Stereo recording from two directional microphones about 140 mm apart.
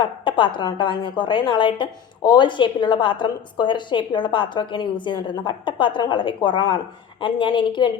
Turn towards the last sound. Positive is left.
turn(degrees=35)  # may be behind; listen again after turning